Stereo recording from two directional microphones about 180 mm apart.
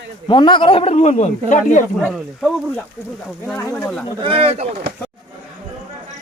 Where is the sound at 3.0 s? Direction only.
10° left (ahead or behind).